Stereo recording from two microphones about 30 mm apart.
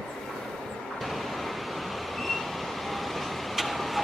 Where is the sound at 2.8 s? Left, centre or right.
Centre.